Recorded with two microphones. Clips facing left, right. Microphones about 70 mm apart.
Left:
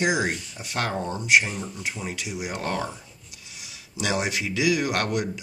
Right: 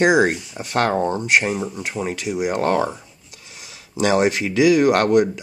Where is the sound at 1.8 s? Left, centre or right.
Right.